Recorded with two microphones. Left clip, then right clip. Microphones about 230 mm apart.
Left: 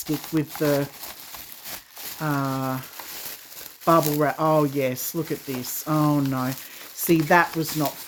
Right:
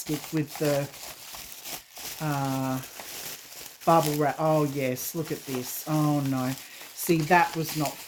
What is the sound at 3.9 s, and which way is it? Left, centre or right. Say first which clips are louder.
Speech: left 3 dB; left.